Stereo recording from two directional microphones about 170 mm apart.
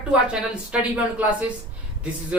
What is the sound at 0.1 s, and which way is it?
A woman's voice, 5° right (ahead or behind).